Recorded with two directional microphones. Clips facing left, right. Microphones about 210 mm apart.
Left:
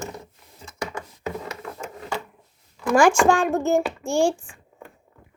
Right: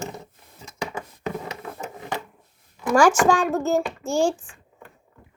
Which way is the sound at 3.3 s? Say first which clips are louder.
Left 1 dB; 10° left (ahead or behind).